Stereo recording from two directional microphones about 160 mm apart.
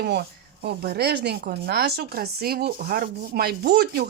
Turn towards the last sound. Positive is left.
turn(degrees=-80)